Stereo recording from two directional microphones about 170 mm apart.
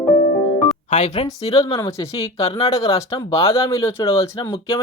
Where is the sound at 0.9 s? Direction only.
40° left (ahead or behind).